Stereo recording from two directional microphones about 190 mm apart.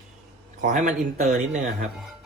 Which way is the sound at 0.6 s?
45° right (ahead or behind).